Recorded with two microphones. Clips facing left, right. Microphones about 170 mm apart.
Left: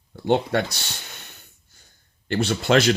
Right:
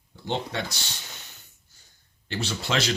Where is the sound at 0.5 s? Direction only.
60° left (ahead or behind).